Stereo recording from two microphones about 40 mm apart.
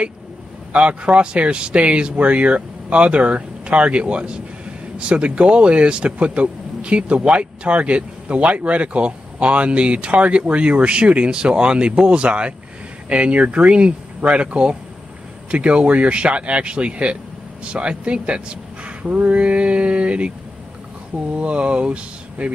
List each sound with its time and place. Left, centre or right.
0.7 s speech: right
21.4 s speech: right